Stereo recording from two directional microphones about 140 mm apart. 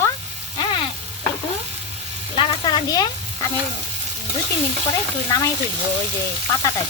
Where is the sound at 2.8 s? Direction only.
30° left (ahead or behind).